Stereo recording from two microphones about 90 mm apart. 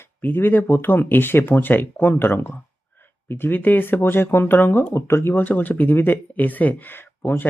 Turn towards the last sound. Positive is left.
turn(degrees=25)  # may be behind; listen again after turning